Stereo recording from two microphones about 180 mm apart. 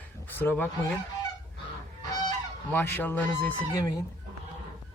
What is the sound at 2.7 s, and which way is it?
Speech, 10° left (ahead or behind).